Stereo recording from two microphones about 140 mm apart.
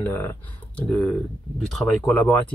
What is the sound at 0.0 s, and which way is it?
Speech, 15° left (ahead or behind).